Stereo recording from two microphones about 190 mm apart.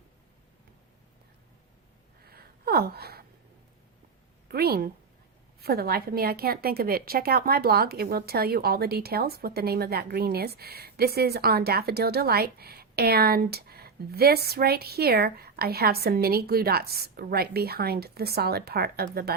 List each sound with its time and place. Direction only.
2.2 s gasp: 55° right (ahead or behind)
4.4 s a sound: 55° right (ahead or behind)
5.5 s a woman's voice: 55° right (ahead or behind)